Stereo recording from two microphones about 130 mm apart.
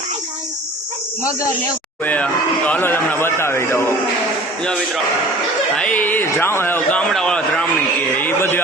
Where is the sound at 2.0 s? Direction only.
10° left (ahead or behind).